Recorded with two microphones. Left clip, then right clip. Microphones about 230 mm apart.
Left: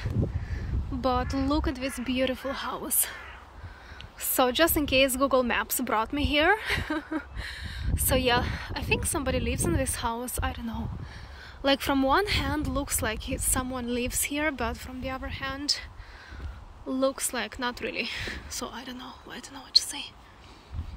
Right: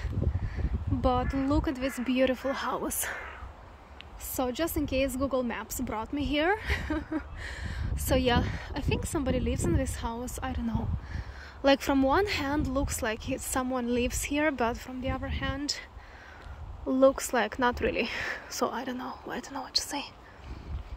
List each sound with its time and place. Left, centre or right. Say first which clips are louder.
1.0 s speech: left 1 dB; centre
4.4 s speech: left 7 dB; centre
16.9 s speech: right 5 dB; centre